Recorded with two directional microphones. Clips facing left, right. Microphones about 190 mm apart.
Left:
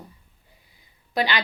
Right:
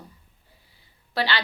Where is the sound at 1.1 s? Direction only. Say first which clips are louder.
Left 2 dB; 15° left (ahead or behind).